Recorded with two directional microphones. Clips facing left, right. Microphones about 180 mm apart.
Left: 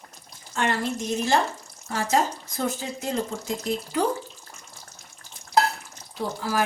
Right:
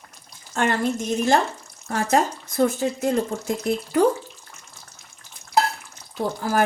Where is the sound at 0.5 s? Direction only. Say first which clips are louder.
Right 4 dB; 50° right (ahead or behind).